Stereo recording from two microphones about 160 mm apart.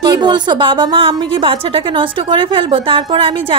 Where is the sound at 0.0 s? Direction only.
25° right (ahead or behind).